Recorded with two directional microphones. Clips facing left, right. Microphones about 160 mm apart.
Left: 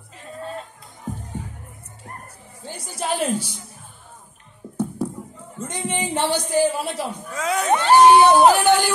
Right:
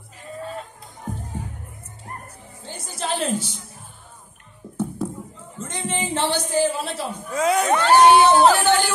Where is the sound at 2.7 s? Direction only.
10° left (ahead or behind).